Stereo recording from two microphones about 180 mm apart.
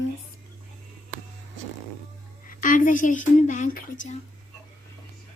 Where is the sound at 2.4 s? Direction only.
50° left (ahead or behind).